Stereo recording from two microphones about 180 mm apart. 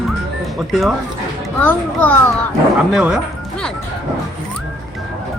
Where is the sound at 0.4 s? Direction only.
Centre (ahead or behind).